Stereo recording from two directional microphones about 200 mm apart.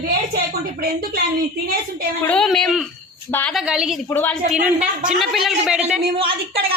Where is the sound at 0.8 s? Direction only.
50° right (ahead or behind).